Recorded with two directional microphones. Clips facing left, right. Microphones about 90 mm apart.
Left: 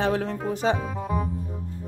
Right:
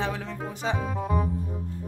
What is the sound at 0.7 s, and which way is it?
Speech, centre (ahead or behind).